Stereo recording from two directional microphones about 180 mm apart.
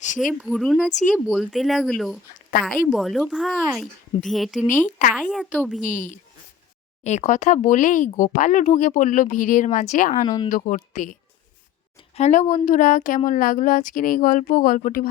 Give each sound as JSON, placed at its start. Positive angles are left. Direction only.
{"t": 0.2, "sound": "speech", "side_deg": 0}
{"t": 4.6, "sound": "speech", "side_deg": 45}
{"t": 5.1, "sound": "speech", "side_deg": 0}
{"t": 5.8, "sound": "speech", "side_deg": 45}
{"t": 10.2, "sound": "speech", "side_deg": 20}
{"t": 10.5, "sound": "speech", "side_deg": 45}